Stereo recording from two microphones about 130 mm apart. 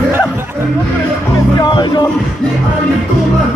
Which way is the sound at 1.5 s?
35° left (ahead or behind).